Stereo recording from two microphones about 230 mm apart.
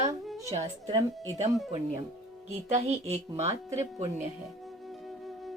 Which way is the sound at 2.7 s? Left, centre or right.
Right.